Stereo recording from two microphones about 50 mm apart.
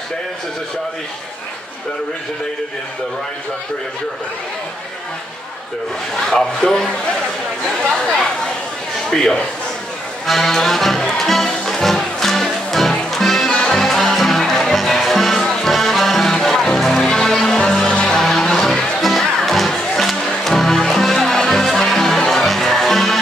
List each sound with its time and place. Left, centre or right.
6.1 s speech: centre
9.1 s speech: centre
10.2 s music: centre
13.5 s music: centre
13.7 s music: centre